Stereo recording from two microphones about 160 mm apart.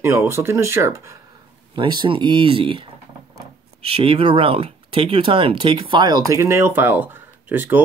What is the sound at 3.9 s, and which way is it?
Speech, 35° right (ahead or behind).